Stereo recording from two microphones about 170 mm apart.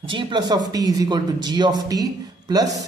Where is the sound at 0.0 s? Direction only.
30° right (ahead or behind).